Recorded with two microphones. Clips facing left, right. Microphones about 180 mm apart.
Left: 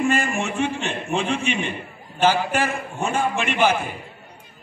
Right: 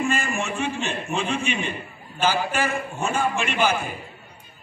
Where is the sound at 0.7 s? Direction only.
70° left (ahead or behind).